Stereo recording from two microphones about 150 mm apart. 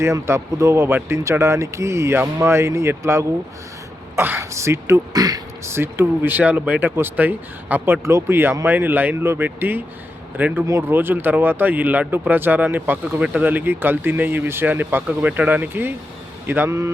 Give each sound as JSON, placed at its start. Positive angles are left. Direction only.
{"t": 0.0, "sound": "speech", "side_deg": -20}